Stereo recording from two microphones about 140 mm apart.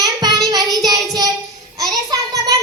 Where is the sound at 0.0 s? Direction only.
30° right (ahead or behind).